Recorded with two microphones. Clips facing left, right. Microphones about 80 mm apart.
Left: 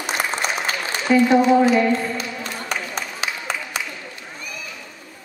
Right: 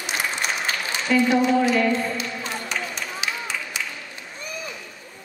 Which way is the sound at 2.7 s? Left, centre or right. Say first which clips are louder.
Left 2 dB; left.